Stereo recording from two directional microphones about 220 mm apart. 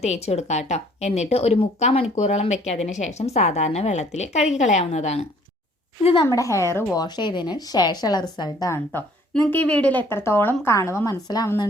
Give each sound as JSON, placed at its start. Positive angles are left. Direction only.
{"t": 0.0, "sound": "a woman's voice", "side_deg": 30}
{"t": 6.2, "sound": "a woman's voice", "side_deg": 15}